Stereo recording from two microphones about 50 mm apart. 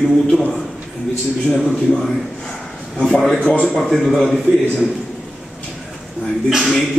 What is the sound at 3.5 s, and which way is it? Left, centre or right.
Speech, centre.